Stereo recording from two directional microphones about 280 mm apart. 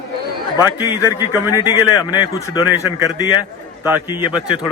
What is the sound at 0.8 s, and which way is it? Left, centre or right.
Speech, centre.